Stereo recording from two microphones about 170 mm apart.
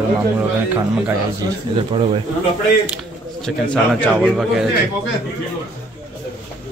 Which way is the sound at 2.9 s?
Centre (ahead or behind).